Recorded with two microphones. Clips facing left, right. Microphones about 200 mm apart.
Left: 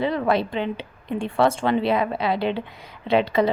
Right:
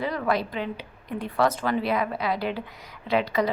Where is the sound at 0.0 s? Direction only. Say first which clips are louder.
Left 4 dB; 25° left (ahead or behind).